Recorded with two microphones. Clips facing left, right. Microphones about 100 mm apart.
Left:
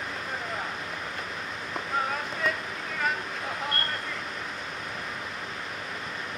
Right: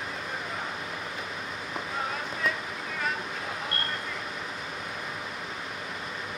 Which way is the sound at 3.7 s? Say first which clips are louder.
Left 2 dB; centre (ahead or behind).